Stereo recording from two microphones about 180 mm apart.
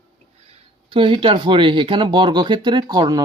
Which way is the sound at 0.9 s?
30° right (ahead or behind).